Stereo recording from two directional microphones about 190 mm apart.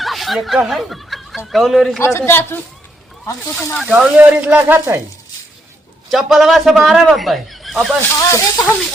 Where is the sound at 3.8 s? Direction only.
5° right (ahead or behind).